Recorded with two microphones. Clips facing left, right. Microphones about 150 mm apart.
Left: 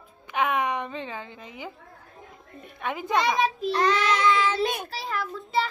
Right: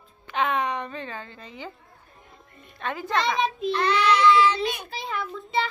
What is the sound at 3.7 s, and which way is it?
Child singing, 40° left (ahead or behind).